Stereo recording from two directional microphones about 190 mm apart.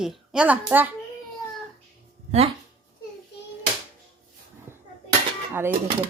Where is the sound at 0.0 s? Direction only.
Centre (ahead or behind).